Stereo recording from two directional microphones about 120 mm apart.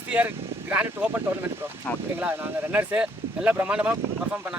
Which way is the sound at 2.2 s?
15° right (ahead or behind).